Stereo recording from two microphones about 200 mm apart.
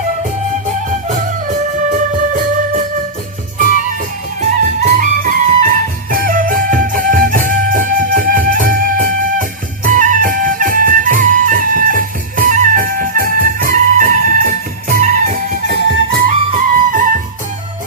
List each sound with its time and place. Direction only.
0.9 s music: 40° right (ahead or behind)
4.4 s music: 40° right (ahead or behind)